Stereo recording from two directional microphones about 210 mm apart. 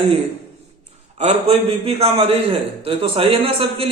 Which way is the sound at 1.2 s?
30° right (ahead or behind).